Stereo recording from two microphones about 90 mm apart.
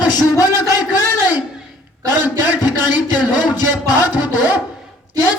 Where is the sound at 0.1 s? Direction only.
45° left (ahead or behind).